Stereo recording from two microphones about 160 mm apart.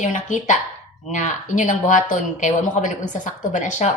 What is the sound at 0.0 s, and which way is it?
A woman's voice, 50° left (ahead or behind).